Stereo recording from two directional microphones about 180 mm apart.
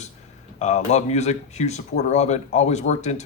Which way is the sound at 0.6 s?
40° left (ahead or behind).